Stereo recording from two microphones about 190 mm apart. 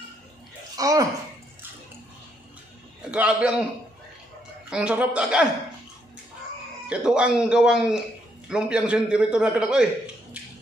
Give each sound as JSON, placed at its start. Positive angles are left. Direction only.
{"t": 0.7, "sound": "speech", "side_deg": -20}
{"t": 3.0, "sound": "a man's voice", "side_deg": -5}
{"t": 4.6, "sound": "a man's voice", "side_deg": -5}
{"t": 6.9, "sound": "a man's voice", "side_deg": -5}